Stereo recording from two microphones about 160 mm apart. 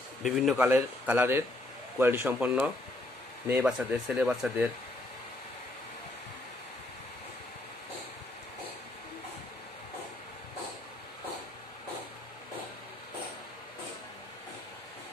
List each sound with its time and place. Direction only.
0.2 s speech: centre (ahead or behind)
0.6 s speech: 10° right (ahead or behind)